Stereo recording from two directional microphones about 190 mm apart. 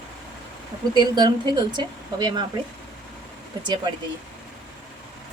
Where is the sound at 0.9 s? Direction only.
20° right (ahead or behind).